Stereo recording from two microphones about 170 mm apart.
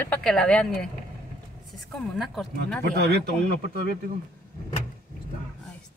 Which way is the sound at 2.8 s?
70° right (ahead or behind).